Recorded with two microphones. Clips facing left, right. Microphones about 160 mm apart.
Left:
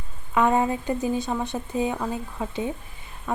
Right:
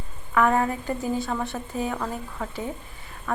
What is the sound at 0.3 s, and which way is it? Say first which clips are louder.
A woman's voice: left 1 dB; 20° left (ahead or behind).